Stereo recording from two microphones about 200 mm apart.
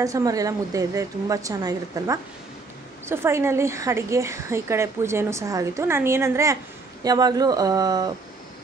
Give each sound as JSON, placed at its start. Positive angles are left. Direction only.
{"t": 0.0, "sound": "a woman's voice", "side_deg": -15}